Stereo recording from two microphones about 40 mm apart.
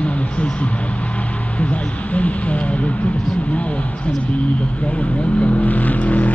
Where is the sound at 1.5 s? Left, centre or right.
Left.